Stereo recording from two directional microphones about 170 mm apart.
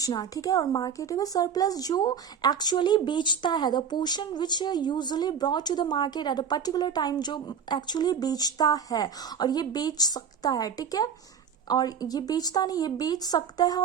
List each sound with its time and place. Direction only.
0.0 s speech: 20° left (ahead or behind)